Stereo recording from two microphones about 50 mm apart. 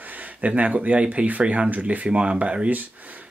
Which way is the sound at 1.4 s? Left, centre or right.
Centre.